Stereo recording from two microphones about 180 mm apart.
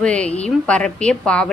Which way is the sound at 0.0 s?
5° left (ahead or behind).